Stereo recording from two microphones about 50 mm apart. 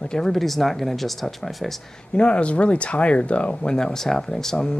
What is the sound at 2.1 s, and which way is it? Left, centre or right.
Speech, left.